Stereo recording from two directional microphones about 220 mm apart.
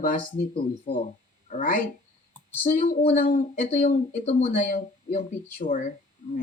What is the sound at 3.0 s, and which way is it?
Speech, 35° left (ahead or behind).